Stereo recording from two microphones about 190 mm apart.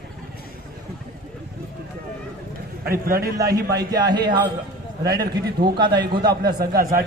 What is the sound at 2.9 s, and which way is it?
Speech, 50° right (ahead or behind).